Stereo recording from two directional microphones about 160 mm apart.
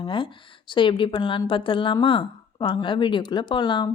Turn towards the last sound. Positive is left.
turn(degrees=30)  # may be behind; listen again after turning